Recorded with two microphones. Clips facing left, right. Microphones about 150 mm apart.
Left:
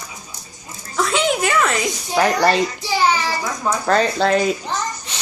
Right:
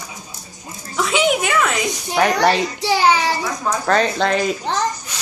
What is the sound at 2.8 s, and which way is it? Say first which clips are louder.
Child singing: right 3 dB; 70° right (ahead or behind).